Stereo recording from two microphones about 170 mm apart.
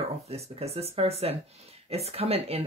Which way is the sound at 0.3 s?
35° right (ahead or behind).